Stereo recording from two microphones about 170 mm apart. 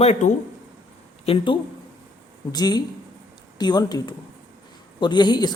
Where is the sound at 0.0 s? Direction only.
40° left (ahead or behind).